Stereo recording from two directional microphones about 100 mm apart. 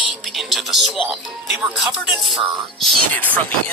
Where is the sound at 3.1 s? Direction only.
15° left (ahead or behind).